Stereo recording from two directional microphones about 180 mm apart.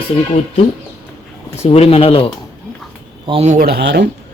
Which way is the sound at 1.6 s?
35° left (ahead or behind).